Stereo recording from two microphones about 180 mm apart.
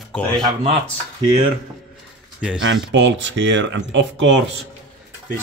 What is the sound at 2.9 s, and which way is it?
Speech, 90° right.